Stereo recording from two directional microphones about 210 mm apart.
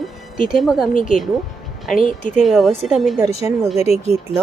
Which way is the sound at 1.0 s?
40° left (ahead or behind).